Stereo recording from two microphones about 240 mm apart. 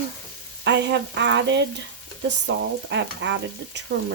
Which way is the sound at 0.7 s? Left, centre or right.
Right.